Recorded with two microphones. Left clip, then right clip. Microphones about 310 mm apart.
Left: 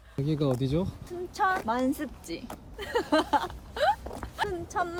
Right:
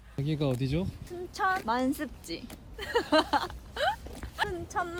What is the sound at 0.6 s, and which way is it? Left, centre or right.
Speech, right.